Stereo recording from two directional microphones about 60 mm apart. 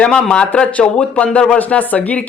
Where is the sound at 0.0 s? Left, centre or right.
Centre.